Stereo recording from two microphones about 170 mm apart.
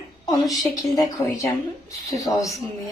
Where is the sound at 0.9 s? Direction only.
20° left (ahead or behind).